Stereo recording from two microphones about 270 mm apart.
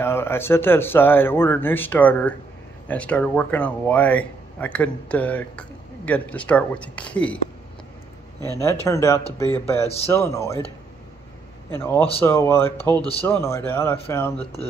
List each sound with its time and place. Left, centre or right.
0.0 s speech: centre
8.5 s speech: centre
11.7 s speech: centre
14.4 s speech: left